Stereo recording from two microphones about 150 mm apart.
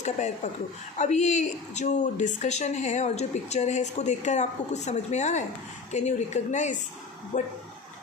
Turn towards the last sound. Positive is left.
turn(degrees=55)  # may be behind; listen again after turning